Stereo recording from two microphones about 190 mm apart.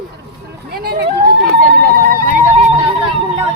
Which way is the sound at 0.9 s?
60° right (ahead or behind).